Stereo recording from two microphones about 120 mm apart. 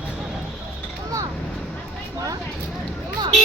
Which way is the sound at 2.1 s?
30° right (ahead or behind).